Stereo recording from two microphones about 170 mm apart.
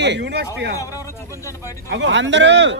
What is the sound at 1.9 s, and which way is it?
Speech, 90° right.